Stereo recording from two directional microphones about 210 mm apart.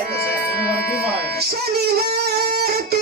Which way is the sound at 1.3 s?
50° right (ahead or behind).